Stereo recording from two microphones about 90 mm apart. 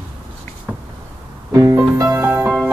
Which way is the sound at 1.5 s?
35° right (ahead or behind).